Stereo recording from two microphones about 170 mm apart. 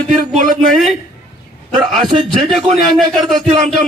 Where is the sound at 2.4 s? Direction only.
Centre (ahead or behind).